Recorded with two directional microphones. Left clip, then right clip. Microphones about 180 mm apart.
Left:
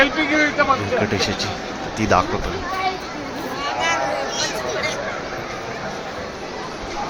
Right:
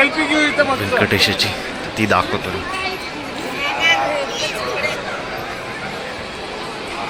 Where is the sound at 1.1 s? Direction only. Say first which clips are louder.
Right 6 dB; 5° right (ahead or behind).